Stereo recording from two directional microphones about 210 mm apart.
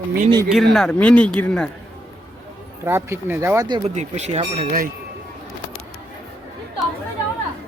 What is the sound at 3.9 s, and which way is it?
Speech, 35° right (ahead or behind).